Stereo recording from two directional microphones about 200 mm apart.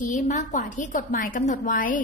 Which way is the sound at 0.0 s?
40° left (ahead or behind).